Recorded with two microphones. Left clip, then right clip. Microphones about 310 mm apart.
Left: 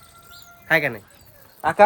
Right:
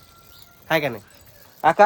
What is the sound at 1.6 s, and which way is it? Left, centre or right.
Speech, right.